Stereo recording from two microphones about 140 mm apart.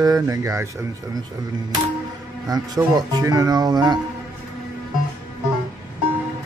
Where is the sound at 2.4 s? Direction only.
30° right (ahead or behind).